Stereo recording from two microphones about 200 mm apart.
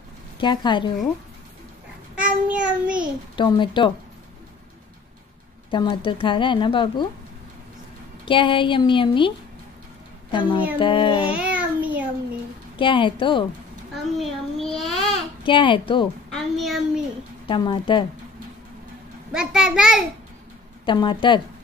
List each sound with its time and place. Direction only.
0.4 s speech: 25° left (ahead or behind)
2.1 s child singing: 5° right (ahead or behind)
3.3 s speech: 25° left (ahead or behind)
5.7 s speech: 25° left (ahead or behind)
8.3 s speech: 25° left (ahead or behind)
10.8 s speech: 25° left (ahead or behind)
11.2 s a sound: 5° right (ahead or behind)
12.7 s speech: 25° left (ahead or behind)
14.1 s child singing: centre (ahead or behind)
15.4 s speech: 25° left (ahead or behind)
16.3 s a sound: centre (ahead or behind)
17.5 s speech: 25° left (ahead or behind)
19.3 s a child's voice: 5° right (ahead or behind)
20.8 s speech: 25° left (ahead or behind)